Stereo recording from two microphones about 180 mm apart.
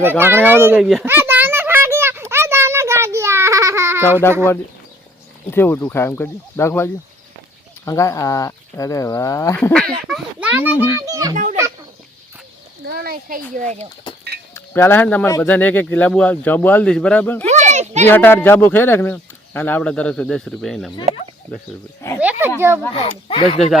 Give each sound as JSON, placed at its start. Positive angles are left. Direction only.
{"t": 0.2, "sound": "speech", "side_deg": -10}
{"t": 1.0, "sound": "a sound", "side_deg": -10}
{"t": 5.5, "sound": "speech", "side_deg": 10}
{"t": 9.7, "sound": "a child's voice", "side_deg": -5}
{"t": 12.8, "sound": "speech", "side_deg": -60}
{"t": 14.5, "sound": "speech", "side_deg": 15}
{"t": 17.5, "sound": "a sound", "side_deg": -40}
{"t": 18.1, "sound": "speech", "side_deg": 10}
{"t": 22.2, "sound": "a sound", "side_deg": -10}
{"t": 22.9, "sound": "speech", "side_deg": 30}